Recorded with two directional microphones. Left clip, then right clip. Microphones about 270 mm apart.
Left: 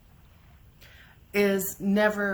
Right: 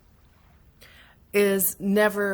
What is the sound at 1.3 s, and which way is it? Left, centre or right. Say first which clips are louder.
A woman's voice: right 3 dB; right.